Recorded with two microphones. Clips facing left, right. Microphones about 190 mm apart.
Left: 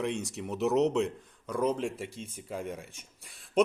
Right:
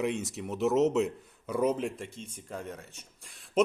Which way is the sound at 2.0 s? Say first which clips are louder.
Left 2 dB; 5° left (ahead or behind).